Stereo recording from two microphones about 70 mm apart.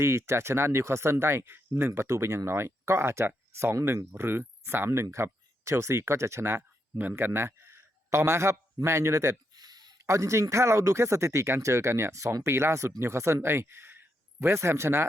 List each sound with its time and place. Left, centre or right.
0.0 s speech: right
4.9 s speech: right
6.6 s speech: right
9.5 s a sound: right
10.1 s speech: right